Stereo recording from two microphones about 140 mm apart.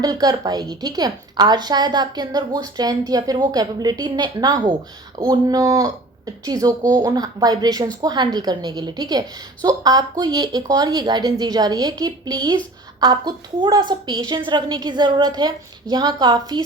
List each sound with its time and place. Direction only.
0.0 s a woman's voice: 25° right (ahead or behind)